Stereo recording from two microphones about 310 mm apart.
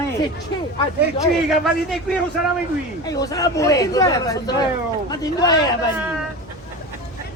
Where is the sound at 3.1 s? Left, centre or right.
Centre.